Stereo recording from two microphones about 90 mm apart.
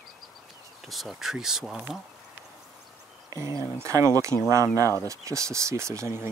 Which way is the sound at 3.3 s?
40° right (ahead or behind).